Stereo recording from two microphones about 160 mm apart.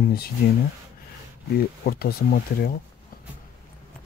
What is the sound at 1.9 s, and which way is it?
Speech, 75° left (ahead or behind).